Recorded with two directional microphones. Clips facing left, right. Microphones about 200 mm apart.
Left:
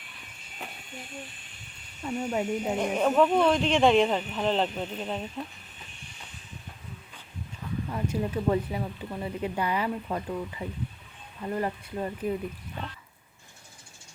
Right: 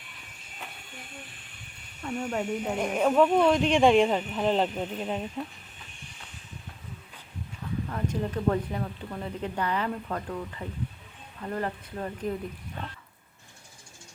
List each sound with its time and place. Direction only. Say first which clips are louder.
2.0 s speech: left 1 dB; 5° left (ahead or behind)
2.7 s speech: right 1 dB; 5° right (ahead or behind)
7.9 s speech: left 2 dB; 10° left (ahead or behind)